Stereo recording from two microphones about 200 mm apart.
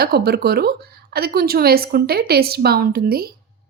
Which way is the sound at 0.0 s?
50° right (ahead or behind).